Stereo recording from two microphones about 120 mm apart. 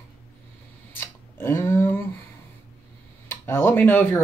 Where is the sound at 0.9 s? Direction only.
20° left (ahead or behind).